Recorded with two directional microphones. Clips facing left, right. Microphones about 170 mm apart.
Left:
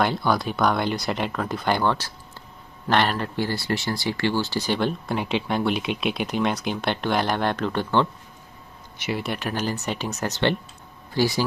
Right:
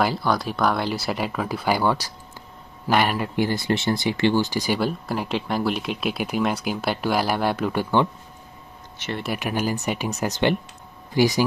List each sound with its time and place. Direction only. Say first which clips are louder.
0.0 s speech: even; centre (ahead or behind)
8.9 s speech: left 2 dB; 10° left (ahead or behind)
9.2 s speech: right 6 dB; 10° right (ahead or behind)